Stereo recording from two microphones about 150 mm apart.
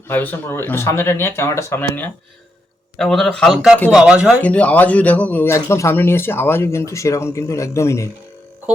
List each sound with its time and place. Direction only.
0.1 s speech: 15° left (ahead or behind)
3.0 s speech: centre (ahead or behind)
4.4 s speech: 10° left (ahead or behind)